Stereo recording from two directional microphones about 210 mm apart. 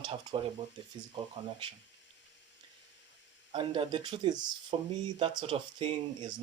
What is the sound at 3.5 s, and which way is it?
Speech, 25° right (ahead or behind).